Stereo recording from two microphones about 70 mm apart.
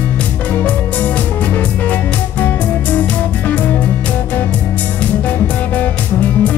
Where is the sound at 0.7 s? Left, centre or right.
Left.